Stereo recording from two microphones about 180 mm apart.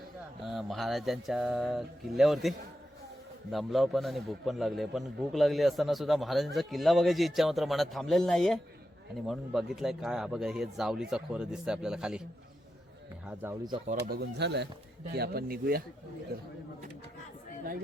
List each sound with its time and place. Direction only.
0.4 s a man's voice: centre (ahead or behind)
13.2 s speech: 10° right (ahead or behind)
14.1 s speech: 65° right (ahead or behind)
15.1 s speech: 60° right (ahead or behind)